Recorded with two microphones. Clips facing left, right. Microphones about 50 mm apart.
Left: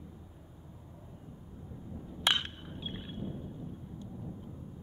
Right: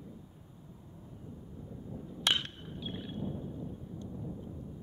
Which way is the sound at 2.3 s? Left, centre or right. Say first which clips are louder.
Left 1 dB; centre.